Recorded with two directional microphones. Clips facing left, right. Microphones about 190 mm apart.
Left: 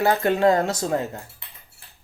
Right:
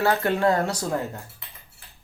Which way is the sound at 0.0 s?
15° left (ahead or behind).